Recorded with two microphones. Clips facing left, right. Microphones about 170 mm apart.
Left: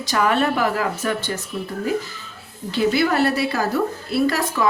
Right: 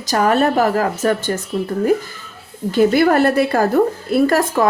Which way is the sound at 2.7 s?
50° right (ahead or behind).